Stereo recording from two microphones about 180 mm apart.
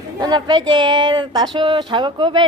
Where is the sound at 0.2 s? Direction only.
25° right (ahead or behind).